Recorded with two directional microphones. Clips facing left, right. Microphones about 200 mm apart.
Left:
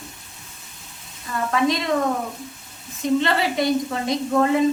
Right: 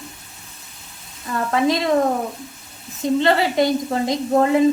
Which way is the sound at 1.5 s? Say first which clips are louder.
Right 2 dB; 30° right (ahead or behind).